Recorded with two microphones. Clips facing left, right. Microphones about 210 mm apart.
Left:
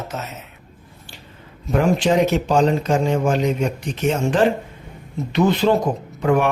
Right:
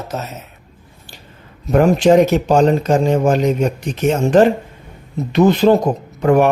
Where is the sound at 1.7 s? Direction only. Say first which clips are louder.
Right 6 dB; 45° right (ahead or behind).